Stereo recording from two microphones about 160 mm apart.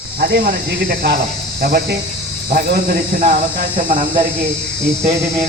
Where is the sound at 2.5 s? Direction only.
65° right (ahead or behind).